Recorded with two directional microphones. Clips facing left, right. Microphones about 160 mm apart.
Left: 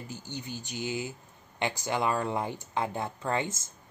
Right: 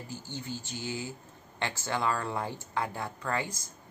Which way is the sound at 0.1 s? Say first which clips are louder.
Right 1 dB; 20° left (ahead or behind).